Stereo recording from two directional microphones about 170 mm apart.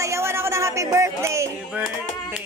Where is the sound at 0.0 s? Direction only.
15° right (ahead or behind).